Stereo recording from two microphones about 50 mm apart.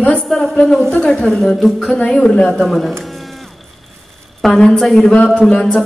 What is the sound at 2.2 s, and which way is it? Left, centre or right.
Speech, centre.